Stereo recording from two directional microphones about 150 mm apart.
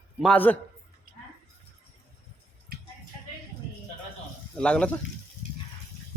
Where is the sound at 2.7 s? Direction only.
90° right.